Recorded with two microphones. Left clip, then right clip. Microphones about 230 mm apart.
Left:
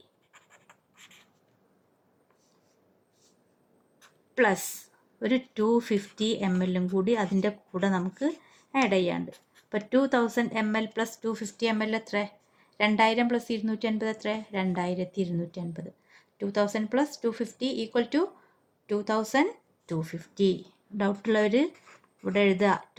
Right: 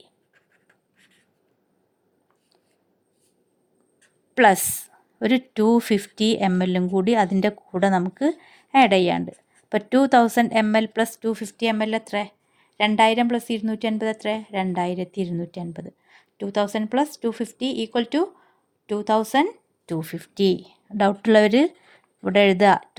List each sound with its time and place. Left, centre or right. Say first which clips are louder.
0.7 s writing: left 5 dB; centre
4.4 s a woman's voice: right 9 dB; right